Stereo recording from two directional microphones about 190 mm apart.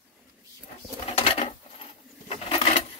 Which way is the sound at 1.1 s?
30° left (ahead or behind).